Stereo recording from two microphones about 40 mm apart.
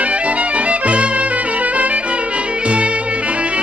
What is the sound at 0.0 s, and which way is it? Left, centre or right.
Music, right.